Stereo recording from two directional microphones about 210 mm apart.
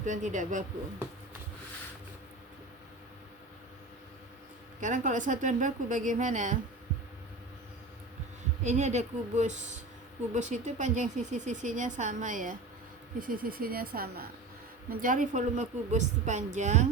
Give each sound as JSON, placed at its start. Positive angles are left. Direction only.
{"t": 0.0, "sound": "a woman's voice", "side_deg": -35}
{"t": 4.8, "sound": "a woman's voice", "side_deg": -35}
{"t": 8.6, "sound": "a woman's voice", "side_deg": -35}